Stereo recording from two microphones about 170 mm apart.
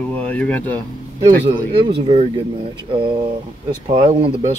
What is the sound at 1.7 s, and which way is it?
Speech, 35° right (ahead or behind).